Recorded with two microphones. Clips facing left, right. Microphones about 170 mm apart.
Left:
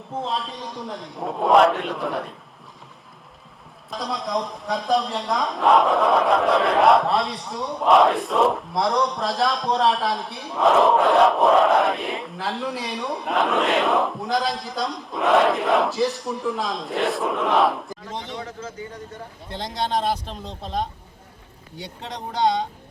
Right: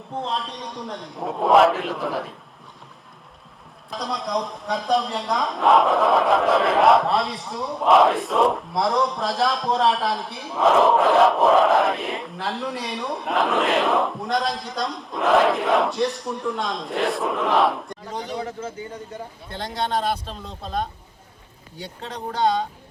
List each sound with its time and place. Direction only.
0.1 s speech: centre (ahead or behind)
3.8 s speech: centre (ahead or behind)
19.5 s speech: 20° left (ahead or behind)
22.0 s speech: 20° left (ahead or behind)